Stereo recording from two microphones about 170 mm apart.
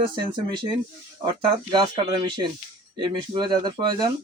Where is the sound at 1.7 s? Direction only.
25° right (ahead or behind).